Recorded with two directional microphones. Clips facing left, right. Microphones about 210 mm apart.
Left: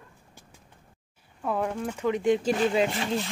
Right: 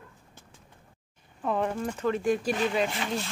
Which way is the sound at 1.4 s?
5° left (ahead or behind).